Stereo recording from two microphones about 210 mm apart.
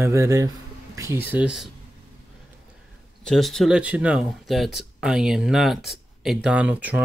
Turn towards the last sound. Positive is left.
turn(degrees=-5)  # may be behind; listen again after turning